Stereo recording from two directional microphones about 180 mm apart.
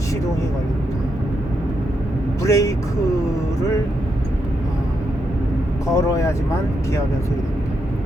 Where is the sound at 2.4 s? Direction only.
20° left (ahead or behind).